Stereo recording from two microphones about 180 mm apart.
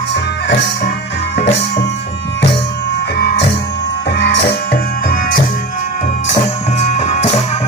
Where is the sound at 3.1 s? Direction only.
65° left (ahead or behind); by 5.4 s 50° left (ahead or behind).